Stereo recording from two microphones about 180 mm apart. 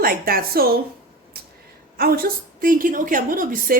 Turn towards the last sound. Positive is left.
turn(degrees=-50)  # may be behind; listen again after turning